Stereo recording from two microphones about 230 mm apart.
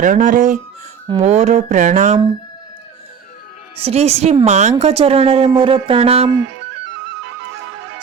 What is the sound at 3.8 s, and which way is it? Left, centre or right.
Speech, right.